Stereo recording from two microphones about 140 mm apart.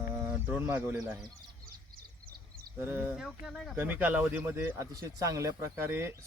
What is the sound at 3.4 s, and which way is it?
Speech, 5° left (ahead or behind).